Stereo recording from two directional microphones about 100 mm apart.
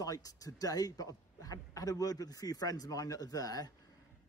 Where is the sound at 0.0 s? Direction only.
35° left (ahead or behind).